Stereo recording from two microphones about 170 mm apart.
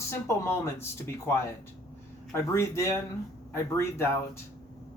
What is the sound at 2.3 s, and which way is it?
Speech, 15° left (ahead or behind).